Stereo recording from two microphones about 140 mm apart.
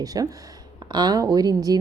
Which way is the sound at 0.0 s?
25° right (ahead or behind).